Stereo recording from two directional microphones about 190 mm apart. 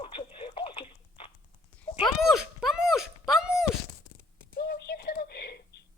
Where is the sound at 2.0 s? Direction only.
Centre (ahead or behind).